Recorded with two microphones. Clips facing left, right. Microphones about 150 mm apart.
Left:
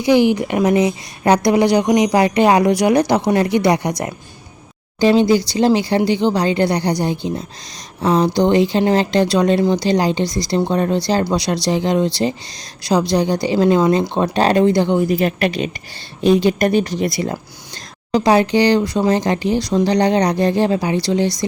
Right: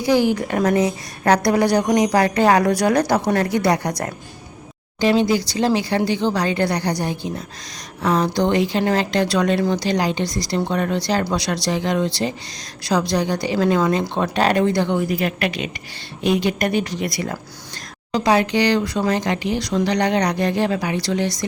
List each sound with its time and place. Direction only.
0.0 s a woman's voice: 20° left (ahead or behind)
4.9 s speech: 30° left (ahead or behind)